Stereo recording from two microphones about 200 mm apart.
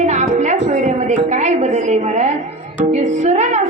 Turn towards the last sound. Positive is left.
turn(degrees=-35)  # may be behind; listen again after turning